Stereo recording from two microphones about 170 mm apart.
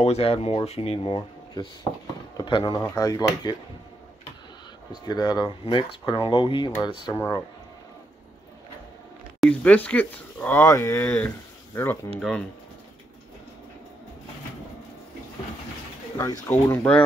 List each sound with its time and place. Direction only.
0.0 s speech: 35° left (ahead or behind); by 3.3 s 20° left (ahead or behind)
5.0 s speech: 25° left (ahead or behind)
9.4 s speech: 5° left (ahead or behind)
16.2 s speech: 15° left (ahead or behind)